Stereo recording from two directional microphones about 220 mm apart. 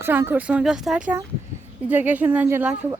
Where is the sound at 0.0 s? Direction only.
10° right (ahead or behind).